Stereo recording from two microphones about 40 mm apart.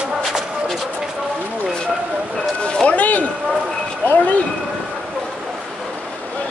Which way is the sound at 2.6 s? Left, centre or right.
Left.